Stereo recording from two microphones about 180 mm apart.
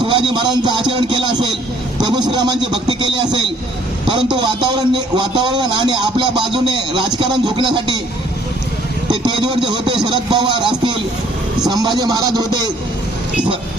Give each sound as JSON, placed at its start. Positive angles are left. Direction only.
{"t": 0.0, "sound": "speech", "side_deg": -25}
{"t": 9.2, "sound": "speech", "side_deg": -25}